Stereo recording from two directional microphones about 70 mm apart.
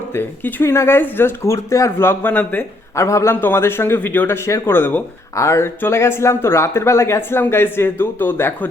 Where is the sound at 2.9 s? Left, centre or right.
Left.